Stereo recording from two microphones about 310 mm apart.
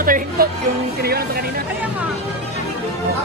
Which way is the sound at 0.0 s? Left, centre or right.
Right.